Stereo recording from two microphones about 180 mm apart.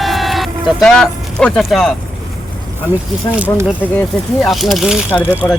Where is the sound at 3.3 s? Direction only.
5° right (ahead or behind).